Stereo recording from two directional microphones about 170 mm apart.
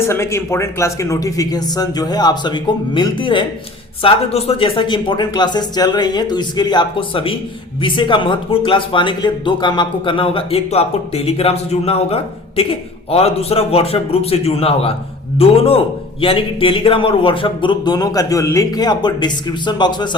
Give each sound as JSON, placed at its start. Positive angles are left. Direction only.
{"t": 0.0, "sound": "speech", "side_deg": 15}